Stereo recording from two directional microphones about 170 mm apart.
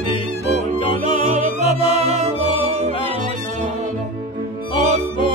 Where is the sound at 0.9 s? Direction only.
40° right (ahead or behind).